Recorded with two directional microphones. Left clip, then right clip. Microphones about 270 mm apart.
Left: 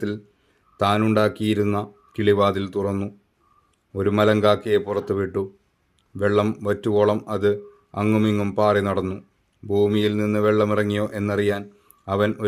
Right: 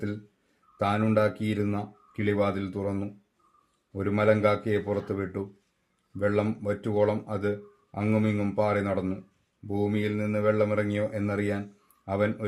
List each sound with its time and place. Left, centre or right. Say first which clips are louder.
0.8 s a man's voice: left 6 dB; left